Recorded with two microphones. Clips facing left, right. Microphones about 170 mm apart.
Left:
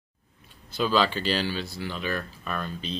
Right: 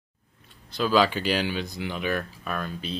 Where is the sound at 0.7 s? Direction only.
5° right (ahead or behind).